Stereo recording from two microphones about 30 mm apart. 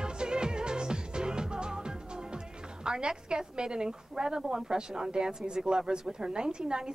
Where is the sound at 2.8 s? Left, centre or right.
Right.